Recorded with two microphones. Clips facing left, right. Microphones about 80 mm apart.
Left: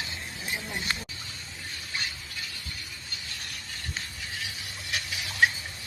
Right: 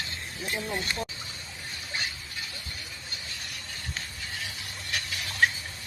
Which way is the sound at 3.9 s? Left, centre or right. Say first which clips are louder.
Even; centre.